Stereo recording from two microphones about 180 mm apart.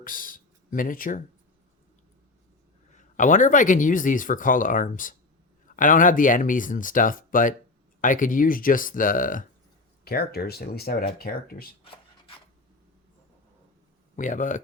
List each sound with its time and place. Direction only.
0.0 s speech: 50° left (ahead or behind)
2.9 s speech: 45° left (ahead or behind)
10.0 s speech: 60° left (ahead or behind)
14.2 s speech: 45° left (ahead or behind)